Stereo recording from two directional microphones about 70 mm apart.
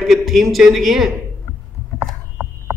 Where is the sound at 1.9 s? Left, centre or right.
Right.